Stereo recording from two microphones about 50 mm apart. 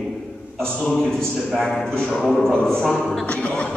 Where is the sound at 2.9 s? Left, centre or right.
Centre.